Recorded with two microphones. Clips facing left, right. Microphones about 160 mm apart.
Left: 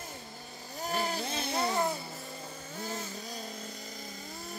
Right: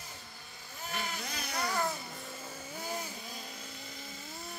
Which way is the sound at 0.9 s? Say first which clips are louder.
Left 6 dB; 35° left (ahead or behind).